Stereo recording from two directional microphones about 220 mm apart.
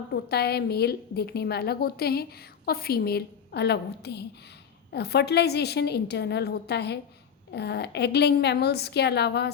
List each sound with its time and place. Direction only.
0.1 s a woman's voice: 45° left (ahead or behind)